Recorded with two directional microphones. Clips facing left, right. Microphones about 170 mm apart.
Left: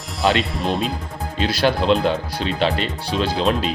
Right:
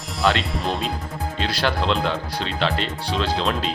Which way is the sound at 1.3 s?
15° left (ahead or behind).